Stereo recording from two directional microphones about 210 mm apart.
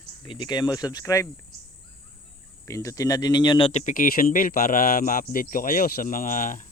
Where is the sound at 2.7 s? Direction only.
15° left (ahead or behind); by 6.6 s 40° left (ahead or behind).